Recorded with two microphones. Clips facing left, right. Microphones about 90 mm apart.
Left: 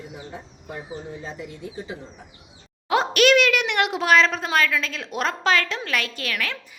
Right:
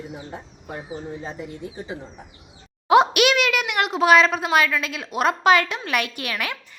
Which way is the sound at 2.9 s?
15° right (ahead or behind).